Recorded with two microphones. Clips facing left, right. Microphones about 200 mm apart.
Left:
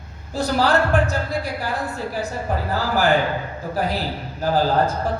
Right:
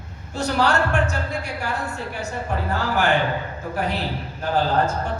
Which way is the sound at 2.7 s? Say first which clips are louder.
Left 2 dB; 35° left (ahead or behind).